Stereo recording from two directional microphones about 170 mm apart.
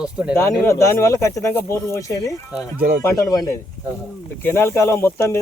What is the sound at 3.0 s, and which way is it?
Speech, 20° left (ahead or behind).